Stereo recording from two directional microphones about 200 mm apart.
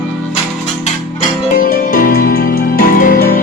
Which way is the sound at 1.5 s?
45° left (ahead or behind).